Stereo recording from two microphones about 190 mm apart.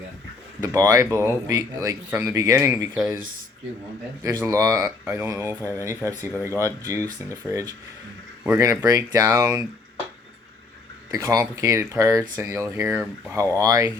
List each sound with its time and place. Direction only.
0.6 s speech: 20° right (ahead or behind)
4.2 s speech: 20° right (ahead or behind)
11.1 s speech: 15° right (ahead or behind)